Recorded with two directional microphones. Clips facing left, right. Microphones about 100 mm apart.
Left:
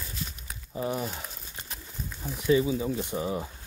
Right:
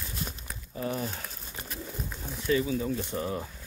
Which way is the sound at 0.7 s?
20° left (ahead or behind).